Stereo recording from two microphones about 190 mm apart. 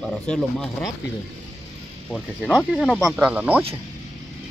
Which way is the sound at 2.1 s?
Centre (ahead or behind).